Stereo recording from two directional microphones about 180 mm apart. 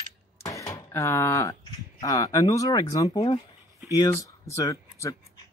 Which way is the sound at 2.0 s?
20° left (ahead or behind).